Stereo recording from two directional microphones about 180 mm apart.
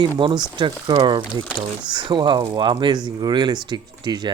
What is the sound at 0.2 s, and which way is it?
Speech, 25° right (ahead or behind).